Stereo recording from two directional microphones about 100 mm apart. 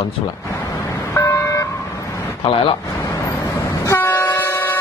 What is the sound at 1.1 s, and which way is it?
Vehicle, 30° left (ahead or behind).